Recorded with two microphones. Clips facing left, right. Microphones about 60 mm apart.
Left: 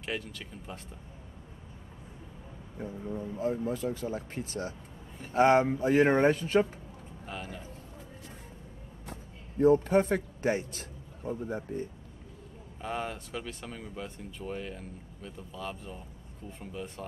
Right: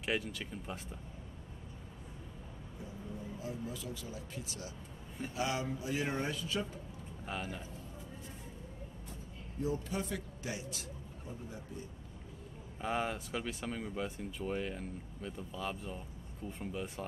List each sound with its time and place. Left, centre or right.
0.0 s speech: centre
2.8 s speech: left
7.2 s speech: centre
9.6 s a man's voice: left
12.8 s speech: centre